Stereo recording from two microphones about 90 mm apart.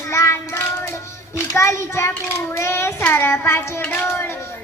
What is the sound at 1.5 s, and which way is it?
A child's voice, 30° left (ahead or behind).